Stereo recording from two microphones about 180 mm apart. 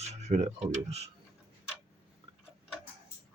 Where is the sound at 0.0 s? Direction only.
35° right (ahead or behind).